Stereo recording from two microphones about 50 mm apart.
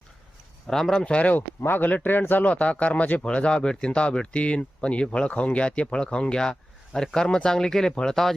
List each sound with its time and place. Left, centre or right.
0.7 s speech: centre
1.0 s speech: left
1.6 s a man's voice: left
2.4 s speech: left; by 8.3 s centre